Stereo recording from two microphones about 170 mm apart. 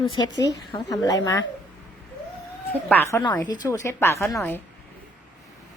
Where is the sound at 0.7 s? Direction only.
25° left (ahead or behind).